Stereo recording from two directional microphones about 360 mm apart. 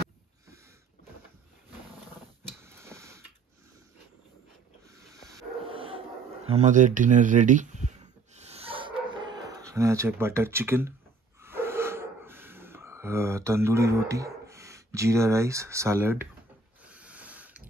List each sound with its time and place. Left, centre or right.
2.6 s a sound: centre
5.1 s sniff: centre
8.4 s dog: centre
9.5 s speech: centre
11.4 s gasp: centre
15.0 s speech: centre
16.8 s a sound: centre